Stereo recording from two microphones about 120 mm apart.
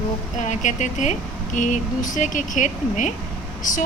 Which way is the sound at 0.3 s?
90° left.